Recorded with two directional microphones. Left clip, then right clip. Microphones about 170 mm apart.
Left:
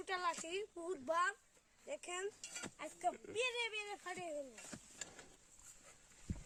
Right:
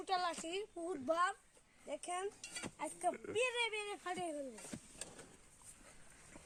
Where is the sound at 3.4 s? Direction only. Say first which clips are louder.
Right 3 dB; 50° right (ahead or behind); by 4.3 s 70° right (ahead or behind).